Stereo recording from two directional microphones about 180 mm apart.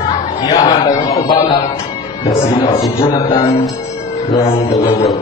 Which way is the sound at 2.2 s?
25° left (ahead or behind).